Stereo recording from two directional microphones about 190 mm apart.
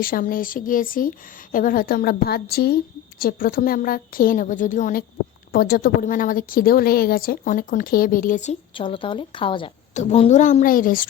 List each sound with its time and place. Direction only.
0.0 s a woman's voice: 50° left (ahead or behind)